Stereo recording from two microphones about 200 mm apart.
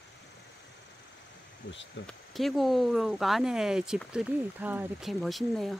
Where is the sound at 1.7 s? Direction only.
60° left (ahead or behind).